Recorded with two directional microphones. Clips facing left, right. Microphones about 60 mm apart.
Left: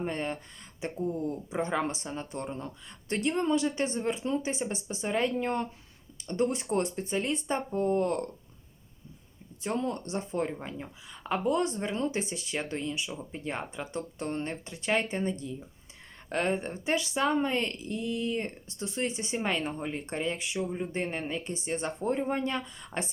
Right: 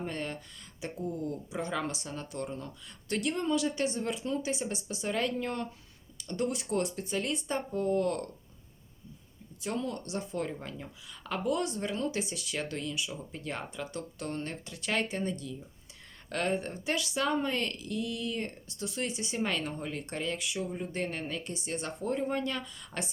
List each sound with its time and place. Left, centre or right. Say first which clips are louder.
0.0 s speech: left 4 dB; left
9.6 s speech: left 3 dB; left